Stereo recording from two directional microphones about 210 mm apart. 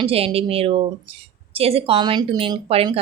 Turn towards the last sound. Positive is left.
turn(degrees=-30)  # may be behind; listen again after turning